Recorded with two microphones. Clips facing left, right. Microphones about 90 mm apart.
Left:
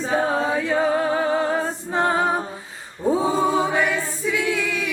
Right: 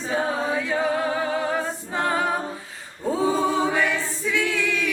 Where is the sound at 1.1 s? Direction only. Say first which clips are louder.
Left 3 dB; 30° left (ahead or behind).